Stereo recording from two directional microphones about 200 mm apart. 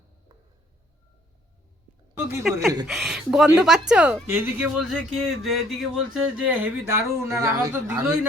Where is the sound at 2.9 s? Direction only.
Centre (ahead or behind).